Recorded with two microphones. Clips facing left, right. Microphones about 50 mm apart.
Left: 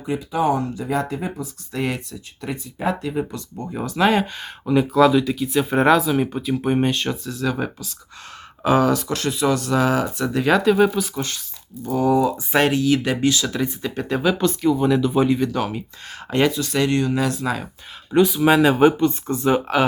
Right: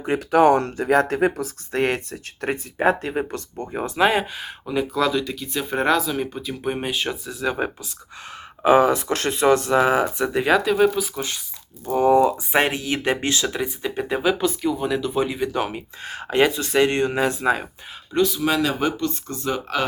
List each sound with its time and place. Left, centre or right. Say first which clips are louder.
0.0 s speech: right 5 dB; right
1.7 s speech: right 3 dB; right
3.6 s speech: even; right
3.9 s speech: left 1 dB; centre
10.5 s speech: left 2 dB; centre
11.9 s speech: right 2 dB; right
12.5 s speech: left 3 dB; centre
13.5 s speech: left 1 dB; centre
15.4 s speech: left 1 dB; centre
16.5 s speech: right 1 dB; right
18.1 s speech: left 4 dB; centre
18.4 s speech: left 7 dB; left